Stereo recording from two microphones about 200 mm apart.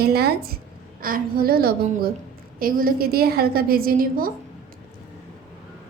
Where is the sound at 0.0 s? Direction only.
50° right (ahead or behind).